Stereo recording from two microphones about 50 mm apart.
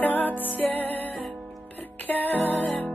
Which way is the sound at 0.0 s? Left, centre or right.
Left.